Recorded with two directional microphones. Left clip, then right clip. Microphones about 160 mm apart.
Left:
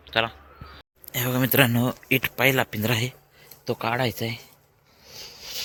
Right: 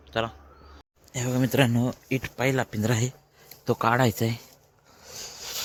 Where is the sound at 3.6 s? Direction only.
55° right (ahead or behind).